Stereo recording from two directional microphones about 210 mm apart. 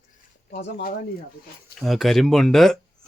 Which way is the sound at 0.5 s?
45° left (ahead or behind).